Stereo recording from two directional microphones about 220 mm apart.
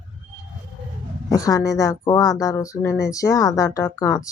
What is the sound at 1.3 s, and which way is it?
Speech, 15° left (ahead or behind).